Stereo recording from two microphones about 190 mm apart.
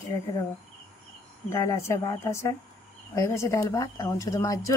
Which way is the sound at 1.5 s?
15° left (ahead or behind).